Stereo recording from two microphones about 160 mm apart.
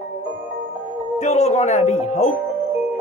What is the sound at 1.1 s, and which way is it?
Music, 45° left (ahead or behind).